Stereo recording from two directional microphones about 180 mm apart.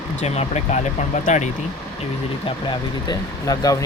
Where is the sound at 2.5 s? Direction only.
25° left (ahead or behind).